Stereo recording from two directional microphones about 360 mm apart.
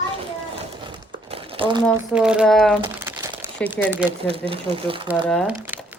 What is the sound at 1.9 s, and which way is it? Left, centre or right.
Speech, centre.